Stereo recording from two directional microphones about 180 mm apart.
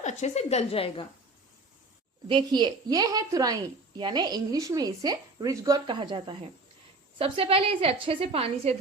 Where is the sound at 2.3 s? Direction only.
25° right (ahead or behind).